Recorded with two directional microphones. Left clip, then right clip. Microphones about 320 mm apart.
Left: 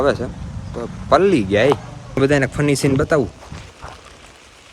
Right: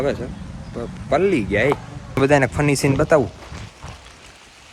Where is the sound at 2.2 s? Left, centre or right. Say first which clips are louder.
Even; centre.